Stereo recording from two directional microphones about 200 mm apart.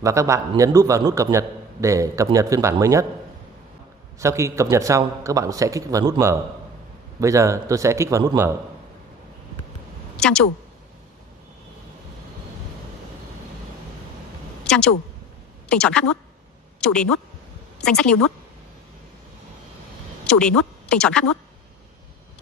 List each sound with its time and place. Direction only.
0.0 s a man's voice: 15° right (ahead or behind)
4.2 s a man's voice: 15° right (ahead or behind)
10.1 s a woman's voice: 5° left (ahead or behind)
14.6 s a sound: 5° left (ahead or behind)
15.7 s speech: 5° left (ahead or behind)
20.2 s speech: 5° left (ahead or behind)